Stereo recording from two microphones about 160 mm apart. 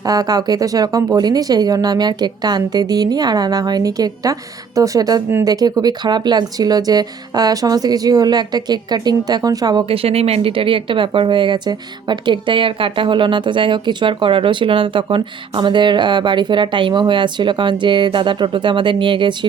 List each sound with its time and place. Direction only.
0.0 s speech: 25° right (ahead or behind)